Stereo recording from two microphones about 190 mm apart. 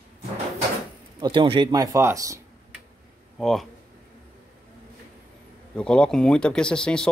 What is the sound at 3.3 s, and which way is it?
Speech, centre (ahead or behind).